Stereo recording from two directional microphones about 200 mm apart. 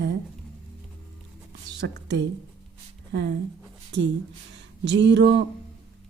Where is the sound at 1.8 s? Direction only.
60° right (ahead or behind).